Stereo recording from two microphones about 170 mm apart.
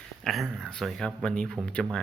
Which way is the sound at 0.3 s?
Centre (ahead or behind).